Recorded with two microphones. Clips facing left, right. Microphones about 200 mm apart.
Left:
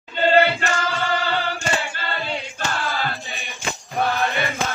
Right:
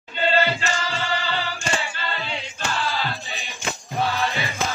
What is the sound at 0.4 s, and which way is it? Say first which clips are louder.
Music: left 4 dB; 55° left (ahead or behind).